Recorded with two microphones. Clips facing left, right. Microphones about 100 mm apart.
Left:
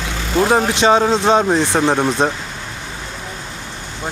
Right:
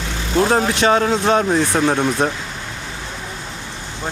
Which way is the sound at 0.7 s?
20° left (ahead or behind).